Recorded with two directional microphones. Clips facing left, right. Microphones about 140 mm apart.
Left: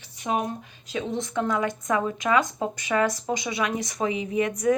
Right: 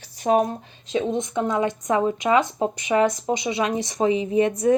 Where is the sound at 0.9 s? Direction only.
20° right (ahead or behind).